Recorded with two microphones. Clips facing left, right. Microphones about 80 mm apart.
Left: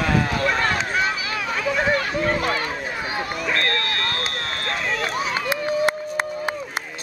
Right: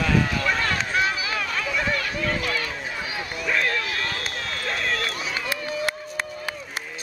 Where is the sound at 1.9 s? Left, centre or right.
Left.